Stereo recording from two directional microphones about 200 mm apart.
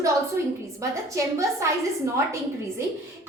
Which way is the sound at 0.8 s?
15° right (ahead or behind).